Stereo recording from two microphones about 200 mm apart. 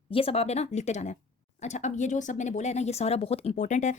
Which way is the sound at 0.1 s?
30° left (ahead or behind).